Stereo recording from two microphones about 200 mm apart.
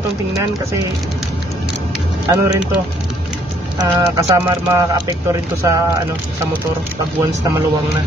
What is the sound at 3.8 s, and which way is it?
Speech, 15° right (ahead or behind).